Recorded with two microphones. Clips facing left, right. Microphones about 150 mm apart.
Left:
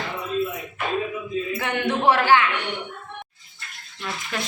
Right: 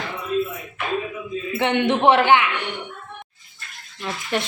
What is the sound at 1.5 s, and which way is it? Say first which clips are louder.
Speech: right 8 dB; 25° right (ahead or behind).